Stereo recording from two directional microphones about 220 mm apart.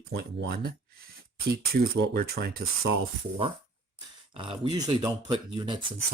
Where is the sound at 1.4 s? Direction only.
45° right (ahead or behind).